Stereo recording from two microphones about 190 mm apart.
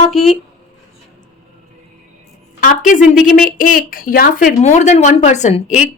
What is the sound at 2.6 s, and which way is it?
A woman's voice, 45° left (ahead or behind).